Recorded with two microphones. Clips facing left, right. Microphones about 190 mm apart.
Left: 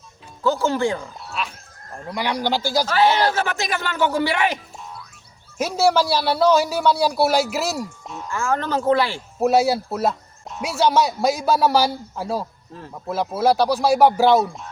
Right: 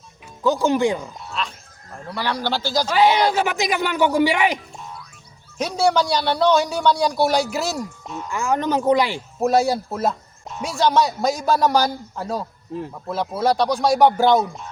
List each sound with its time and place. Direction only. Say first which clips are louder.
0.4 s speech: right 2 dB; 15° right (ahead or behind)
1.2 s speech: right 1 dB; 5° left (ahead or behind)
2.8 s speech: right 2 dB; 15° right (ahead or behind)
5.5 s speech: left 1 dB; 5° left (ahead or behind)
8.3 s speech: right 2 dB; 15° right (ahead or behind)
9.4 s speech: left 1 dB; 5° left (ahead or behind)